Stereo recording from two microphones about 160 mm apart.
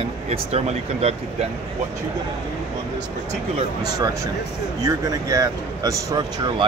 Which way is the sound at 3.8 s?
25° right (ahead or behind).